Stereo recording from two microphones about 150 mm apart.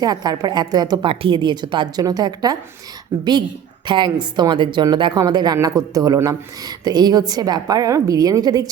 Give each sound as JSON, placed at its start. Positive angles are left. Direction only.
{"t": 0.0, "sound": "a woman's voice", "side_deg": -25}
{"t": 3.8, "sound": "a woman's voice", "side_deg": -30}